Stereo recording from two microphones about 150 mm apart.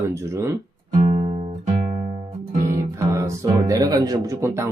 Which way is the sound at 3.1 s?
20° right (ahead or behind).